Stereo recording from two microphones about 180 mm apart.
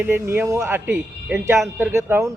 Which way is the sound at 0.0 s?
10° right (ahead or behind).